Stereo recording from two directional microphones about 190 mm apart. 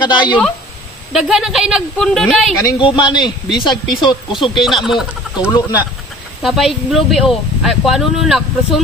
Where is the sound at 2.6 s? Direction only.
20° left (ahead or behind).